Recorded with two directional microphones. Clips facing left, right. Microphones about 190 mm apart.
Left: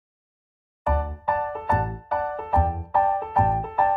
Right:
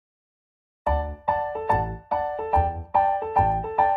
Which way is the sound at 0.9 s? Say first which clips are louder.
Even; 25° right (ahead or behind).